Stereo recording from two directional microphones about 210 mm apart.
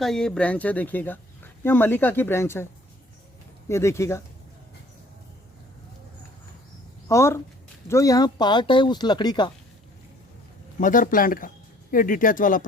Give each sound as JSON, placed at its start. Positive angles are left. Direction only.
{"t": 0.0, "sound": "speech", "side_deg": 0}
{"t": 3.7, "sound": "speech", "side_deg": 15}
{"t": 7.1, "sound": "speech", "side_deg": 15}
{"t": 10.8, "sound": "speech", "side_deg": 40}